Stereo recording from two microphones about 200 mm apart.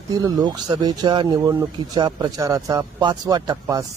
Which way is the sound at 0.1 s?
20° right (ahead or behind).